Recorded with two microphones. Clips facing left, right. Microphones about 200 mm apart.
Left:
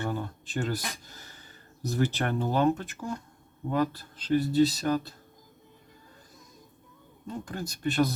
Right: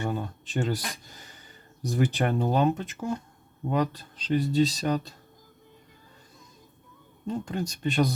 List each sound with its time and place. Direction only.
0.0 s a sound: 20° right (ahead or behind)
1.9 s speech: 15° right (ahead or behind)
7.3 s speech: 20° right (ahead or behind)